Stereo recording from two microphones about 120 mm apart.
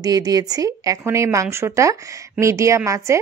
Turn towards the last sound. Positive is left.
turn(degrees=-25)  # may be behind; listen again after turning